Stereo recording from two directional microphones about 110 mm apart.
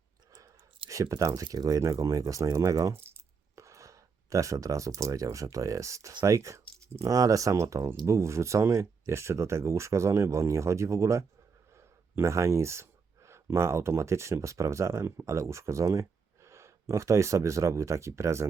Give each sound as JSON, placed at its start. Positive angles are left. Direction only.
{"t": 0.3, "sound": "speech", "side_deg": -30}